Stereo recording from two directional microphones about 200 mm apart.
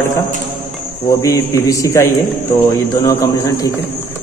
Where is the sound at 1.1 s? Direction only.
15° left (ahead or behind).